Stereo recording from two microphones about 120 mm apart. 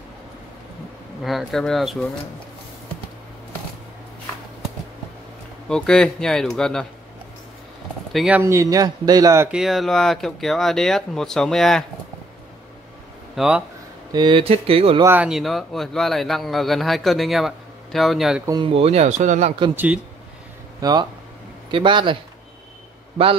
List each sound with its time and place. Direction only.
1.2 s a man's voice: centre (ahead or behind)
5.7 s a man's voice: 5° left (ahead or behind)
8.1 s speech: centre (ahead or behind)
8.4 s speech: 25° right (ahead or behind)
9.5 s a man's voice: centre (ahead or behind)
13.4 s speech: 10° right (ahead or behind)
14.1 s speech: 40° right (ahead or behind)
15.2 s a man's voice: centre (ahead or behind)
18.7 s speech: 55° right (ahead or behind); by 19.5 s 80° right
19.7 s speech: 15° right (ahead or behind)
20.8 s speech: 35° right (ahead or behind)